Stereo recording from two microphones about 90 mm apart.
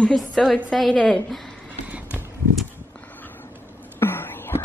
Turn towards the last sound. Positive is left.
turn(degrees=25)  # may be behind; listen again after turning